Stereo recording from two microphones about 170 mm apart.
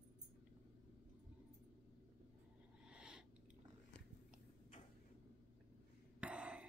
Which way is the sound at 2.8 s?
5° right (ahead or behind).